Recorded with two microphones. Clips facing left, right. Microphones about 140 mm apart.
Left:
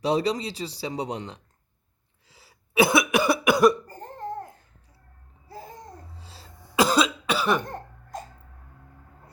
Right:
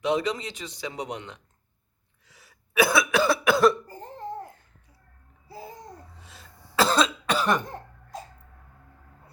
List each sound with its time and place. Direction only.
0.0 s speech: 35° left (ahead or behind)
2.2 s cough: 30° left (ahead or behind)
5.5 s babbling: 10° right (ahead or behind)
6.1 s a sound: 30° left (ahead or behind)
6.7 s cough: 10° left (ahead or behind)